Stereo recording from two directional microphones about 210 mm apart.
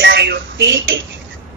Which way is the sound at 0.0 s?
55° right (ahead or behind).